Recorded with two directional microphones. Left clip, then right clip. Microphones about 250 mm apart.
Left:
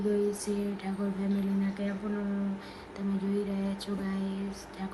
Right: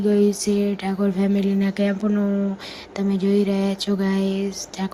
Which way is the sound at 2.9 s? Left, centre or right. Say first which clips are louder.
Right 13 dB; right.